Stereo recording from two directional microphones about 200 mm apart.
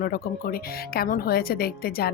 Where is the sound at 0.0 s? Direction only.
45° left (ahead or behind).